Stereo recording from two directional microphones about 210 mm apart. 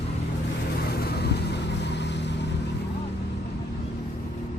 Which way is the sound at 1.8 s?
55° left (ahead or behind).